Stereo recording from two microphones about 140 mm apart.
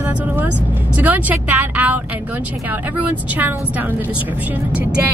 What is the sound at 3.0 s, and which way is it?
Speech, 10° right (ahead or behind).